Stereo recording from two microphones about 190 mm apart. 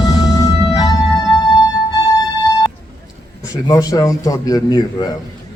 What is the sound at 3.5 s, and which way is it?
Speech, 20° left (ahead or behind).